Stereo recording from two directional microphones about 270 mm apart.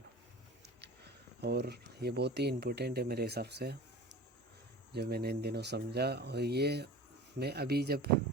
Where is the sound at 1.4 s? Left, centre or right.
Right.